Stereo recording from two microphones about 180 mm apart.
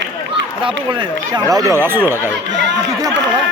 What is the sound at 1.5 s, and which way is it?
Speech, 20° right (ahead or behind).